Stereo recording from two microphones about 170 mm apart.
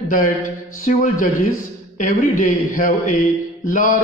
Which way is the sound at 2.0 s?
55° left (ahead or behind).